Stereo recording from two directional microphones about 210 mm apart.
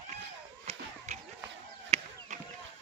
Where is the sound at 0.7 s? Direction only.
30° right (ahead or behind).